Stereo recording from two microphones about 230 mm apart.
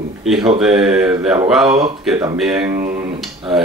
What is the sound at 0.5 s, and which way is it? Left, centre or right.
Speech, centre.